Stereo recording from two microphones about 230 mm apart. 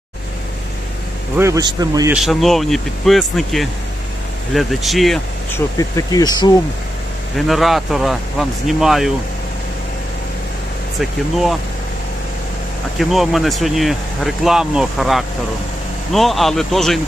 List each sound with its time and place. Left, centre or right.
1.4 s speech: centre
2.1 s speech: centre
5.5 s speech: centre
7.3 s speech: centre
13.0 s speech: centre